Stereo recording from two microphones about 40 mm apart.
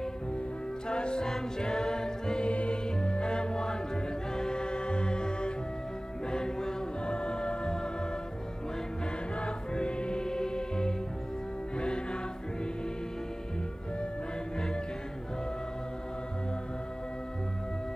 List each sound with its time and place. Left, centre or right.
0.8 s music: left
9.4 s music: left